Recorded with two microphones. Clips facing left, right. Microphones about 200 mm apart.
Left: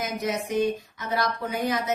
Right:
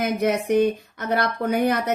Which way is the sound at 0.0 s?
60° right (ahead or behind).